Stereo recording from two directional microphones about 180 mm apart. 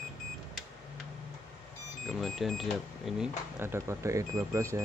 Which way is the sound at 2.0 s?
Centre (ahead or behind).